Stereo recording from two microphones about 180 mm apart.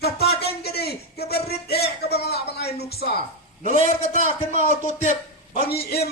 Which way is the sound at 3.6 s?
45° right (ahead or behind).